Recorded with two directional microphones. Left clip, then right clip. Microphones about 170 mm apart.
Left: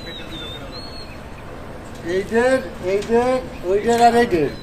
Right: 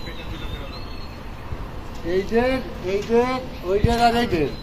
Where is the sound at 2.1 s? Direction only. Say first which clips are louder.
Left 4 dB; 30° left (ahead or behind).